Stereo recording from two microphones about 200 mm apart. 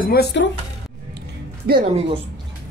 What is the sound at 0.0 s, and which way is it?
Speech, 50° left (ahead or behind).